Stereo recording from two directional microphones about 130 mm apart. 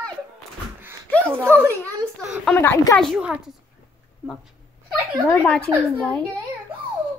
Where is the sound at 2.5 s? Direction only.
15° left (ahead or behind).